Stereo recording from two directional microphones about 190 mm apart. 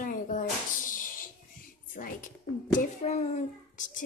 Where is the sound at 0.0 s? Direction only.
45° left (ahead or behind).